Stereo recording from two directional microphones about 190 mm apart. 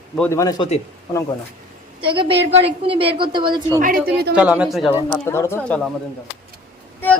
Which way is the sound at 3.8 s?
45° right (ahead or behind).